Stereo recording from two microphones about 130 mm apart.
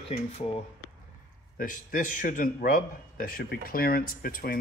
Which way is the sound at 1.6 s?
90° left.